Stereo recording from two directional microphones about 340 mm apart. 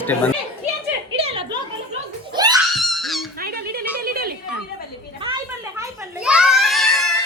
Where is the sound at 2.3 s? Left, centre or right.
Centre.